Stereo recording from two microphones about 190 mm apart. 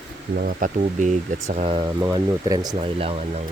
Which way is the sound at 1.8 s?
20° right (ahead or behind).